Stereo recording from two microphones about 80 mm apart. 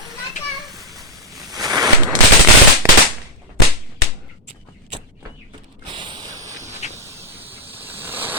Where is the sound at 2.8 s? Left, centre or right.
Right.